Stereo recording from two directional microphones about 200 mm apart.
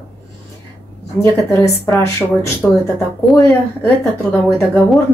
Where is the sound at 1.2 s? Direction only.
15° left (ahead or behind).